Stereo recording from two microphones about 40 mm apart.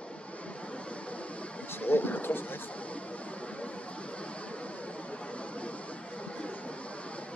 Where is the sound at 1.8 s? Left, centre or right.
Left.